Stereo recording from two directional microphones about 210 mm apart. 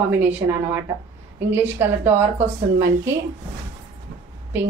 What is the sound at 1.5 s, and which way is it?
A woman's voice, 10° right (ahead or behind).